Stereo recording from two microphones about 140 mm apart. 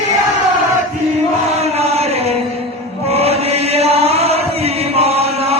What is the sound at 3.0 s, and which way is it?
Chant, 45° right (ahead or behind).